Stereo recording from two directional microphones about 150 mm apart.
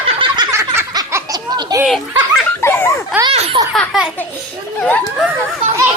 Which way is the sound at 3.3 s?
45° right (ahead or behind).